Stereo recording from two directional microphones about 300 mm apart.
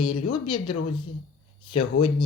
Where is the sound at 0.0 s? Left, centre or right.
Centre.